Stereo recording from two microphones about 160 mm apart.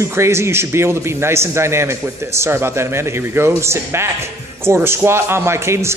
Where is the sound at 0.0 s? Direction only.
15° right (ahead or behind).